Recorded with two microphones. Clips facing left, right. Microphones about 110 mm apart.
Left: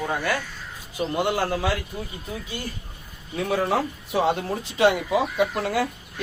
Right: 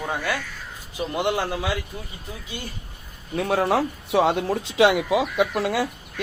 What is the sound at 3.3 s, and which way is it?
Speech, 70° right (ahead or behind).